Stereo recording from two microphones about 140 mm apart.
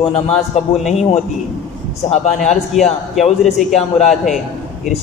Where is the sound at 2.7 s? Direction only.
Centre (ahead or behind).